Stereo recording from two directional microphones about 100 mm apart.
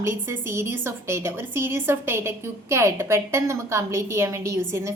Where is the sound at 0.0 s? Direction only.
25° right (ahead or behind).